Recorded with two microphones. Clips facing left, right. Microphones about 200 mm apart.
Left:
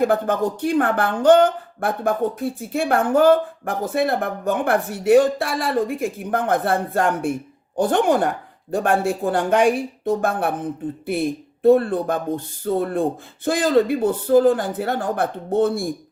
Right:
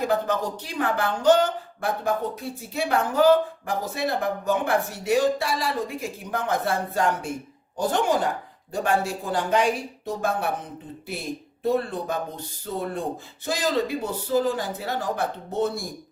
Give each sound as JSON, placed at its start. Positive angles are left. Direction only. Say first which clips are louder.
{"t": 0.0, "sound": "speech", "louder": "left 5 dB", "side_deg": 55}